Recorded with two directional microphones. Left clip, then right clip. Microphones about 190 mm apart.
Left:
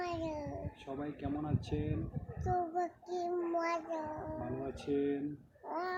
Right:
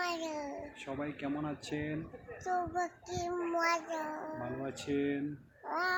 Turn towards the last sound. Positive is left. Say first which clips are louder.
# right 5 dB
turn(degrees=10)  # may be behind; listen again after turning